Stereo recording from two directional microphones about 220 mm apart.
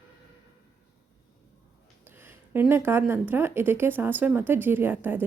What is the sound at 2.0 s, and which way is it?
A woman's voice, 10° right (ahead or behind).